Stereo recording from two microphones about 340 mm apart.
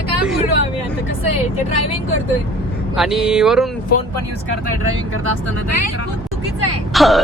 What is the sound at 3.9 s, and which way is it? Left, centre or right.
Speech, left.